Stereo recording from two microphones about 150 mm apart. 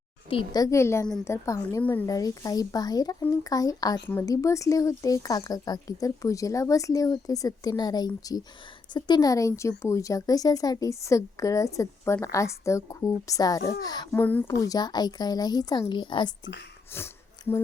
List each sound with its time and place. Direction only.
0.3 s speech: 35° left (ahead or behind)
0.6 s a woman's voice: 20° left (ahead or behind)
2.0 s speech: 25° left (ahead or behind)
14.1 s a woman's voice: 10° left (ahead or behind)
14.6 s speech: 25° left (ahead or behind)
16.9 s a woman's voice: 15° left (ahead or behind)